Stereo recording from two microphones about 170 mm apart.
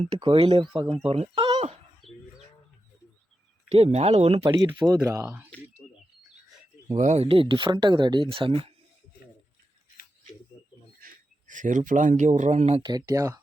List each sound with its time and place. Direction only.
0.2 s speech: 30° right (ahead or behind)
2.0 s bird: centre (ahead or behind)
3.7 s speech: 40° right (ahead or behind)
4.5 s speech: 20° right (ahead or behind)
5.2 s speech: 10° right (ahead or behind)
5.8 s bird: centre (ahead or behind)
6.9 s speech: 40° right (ahead or behind)
10.5 s bird: 20° left (ahead or behind)
11.0 s a man's voice: 50° right (ahead or behind)
12.8 s speech: 20° right (ahead or behind)